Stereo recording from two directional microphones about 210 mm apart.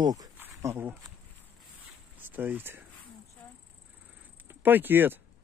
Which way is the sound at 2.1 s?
10° right (ahead or behind).